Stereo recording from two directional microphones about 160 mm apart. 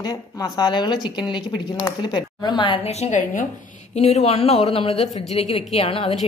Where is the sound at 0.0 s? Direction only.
25° left (ahead or behind).